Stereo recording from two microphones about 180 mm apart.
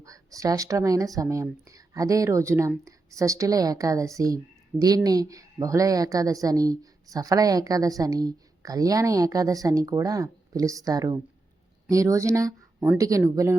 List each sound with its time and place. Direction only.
0.0 s speech: 20° right (ahead or behind)